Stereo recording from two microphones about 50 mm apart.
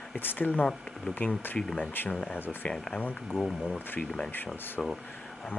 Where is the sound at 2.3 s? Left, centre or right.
Left.